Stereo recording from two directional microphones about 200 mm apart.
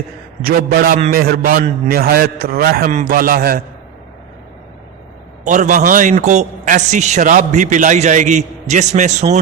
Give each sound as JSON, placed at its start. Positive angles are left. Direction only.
{"t": 0.4, "sound": "a man's voice", "side_deg": -50}
{"t": 5.5, "sound": "a man's voice", "side_deg": -40}